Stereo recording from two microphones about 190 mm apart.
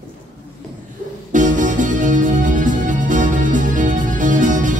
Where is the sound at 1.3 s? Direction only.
40° right (ahead or behind).